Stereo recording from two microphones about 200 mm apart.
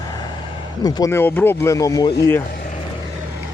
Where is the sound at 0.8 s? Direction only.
20° left (ahead or behind).